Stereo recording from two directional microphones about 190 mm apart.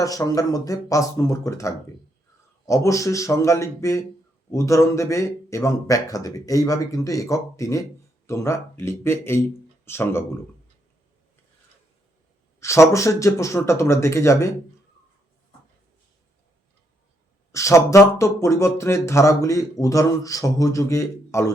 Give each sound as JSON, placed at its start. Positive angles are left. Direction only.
{"t": 0.0, "sound": "speech", "side_deg": 20}
{"t": 12.5, "sound": "speech", "side_deg": 15}
{"t": 17.5, "sound": "speech", "side_deg": 15}